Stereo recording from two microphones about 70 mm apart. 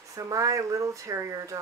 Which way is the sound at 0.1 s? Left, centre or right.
Right.